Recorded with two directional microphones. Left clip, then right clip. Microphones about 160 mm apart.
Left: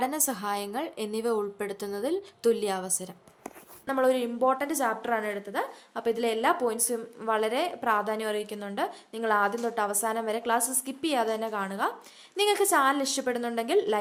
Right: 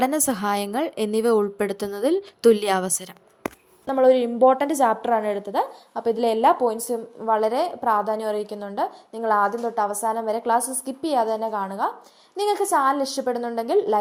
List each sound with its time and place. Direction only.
0.0 s a woman's voice: 35° right (ahead or behind)
3.8 s a woman's voice: 15° right (ahead or behind)
4.5 s a woman's voice: 35° right (ahead or behind)
5.9 s a woman's voice: 10° right (ahead or behind)
6.1 s a woman's voice: 20° right (ahead or behind); by 13.8 s 5° right (ahead or behind)